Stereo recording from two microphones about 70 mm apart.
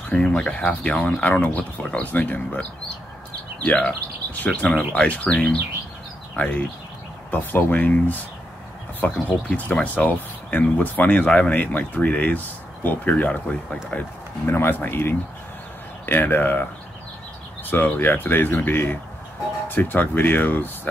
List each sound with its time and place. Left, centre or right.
0.1 s speech: centre
3.6 s speech: centre
14.4 s speech: left
17.6 s speech: left